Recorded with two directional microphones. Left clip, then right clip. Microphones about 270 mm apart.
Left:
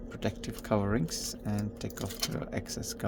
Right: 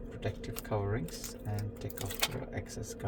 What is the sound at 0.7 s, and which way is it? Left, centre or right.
Speech, left.